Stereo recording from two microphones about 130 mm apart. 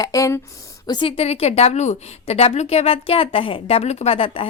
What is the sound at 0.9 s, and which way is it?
A woman's voice, 40° left (ahead or behind).